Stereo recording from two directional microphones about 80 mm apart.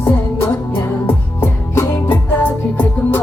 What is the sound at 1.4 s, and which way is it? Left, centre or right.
Music, left.